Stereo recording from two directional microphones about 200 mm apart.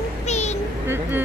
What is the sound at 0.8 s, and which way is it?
Speech, 10° right (ahead or behind).